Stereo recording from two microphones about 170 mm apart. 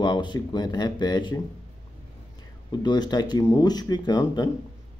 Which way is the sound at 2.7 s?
25° left (ahead or behind).